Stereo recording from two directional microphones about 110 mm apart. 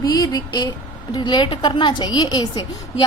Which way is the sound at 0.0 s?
35° left (ahead or behind).